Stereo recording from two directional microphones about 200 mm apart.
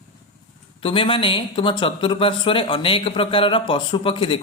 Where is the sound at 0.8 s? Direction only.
25° left (ahead or behind).